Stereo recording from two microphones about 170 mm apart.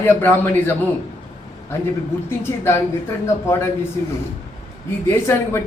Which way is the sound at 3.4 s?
15° left (ahead or behind).